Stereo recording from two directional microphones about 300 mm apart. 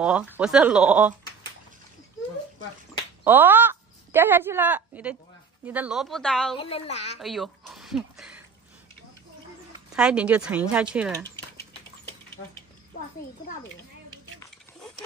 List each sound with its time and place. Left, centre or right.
0.0 s a woman's voice: centre
3.3 s a woman's voice: centre
6.5 s a child's voice: centre
7.2 s speech: centre
9.9 s a woman's voice: centre